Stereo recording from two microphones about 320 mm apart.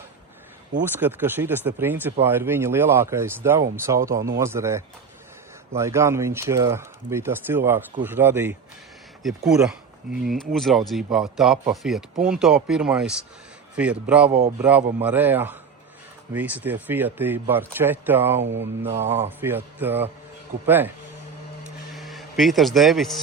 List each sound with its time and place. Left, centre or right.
0.9 s speech: centre
18.4 s mantra: right
19.0 s speech: centre
21.9 s speech: centre